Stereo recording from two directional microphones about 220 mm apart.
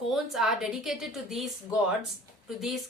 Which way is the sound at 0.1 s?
Centre (ahead or behind).